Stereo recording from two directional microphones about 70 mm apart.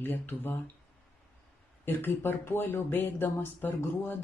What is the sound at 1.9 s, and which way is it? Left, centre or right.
Speech, left.